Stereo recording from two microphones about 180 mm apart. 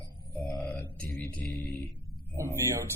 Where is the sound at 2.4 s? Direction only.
15° right (ahead or behind).